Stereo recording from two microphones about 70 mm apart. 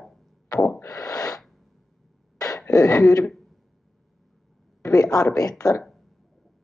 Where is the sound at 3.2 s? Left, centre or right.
Centre.